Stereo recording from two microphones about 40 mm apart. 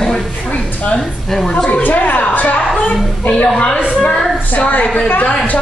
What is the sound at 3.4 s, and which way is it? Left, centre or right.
A woman's voice, left.